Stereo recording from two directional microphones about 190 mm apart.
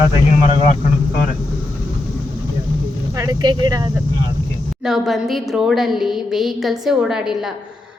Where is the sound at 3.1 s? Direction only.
20° right (ahead or behind).